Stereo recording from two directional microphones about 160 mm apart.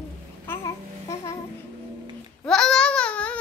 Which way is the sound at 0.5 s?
20° left (ahead or behind).